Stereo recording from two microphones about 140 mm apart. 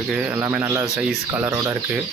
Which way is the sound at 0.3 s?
15° right (ahead or behind).